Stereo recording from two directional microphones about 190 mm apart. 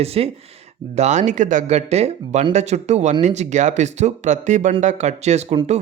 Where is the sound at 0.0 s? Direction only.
30° right (ahead or behind).